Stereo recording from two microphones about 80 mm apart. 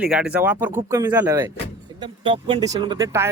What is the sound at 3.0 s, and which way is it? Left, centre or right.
Speech, right.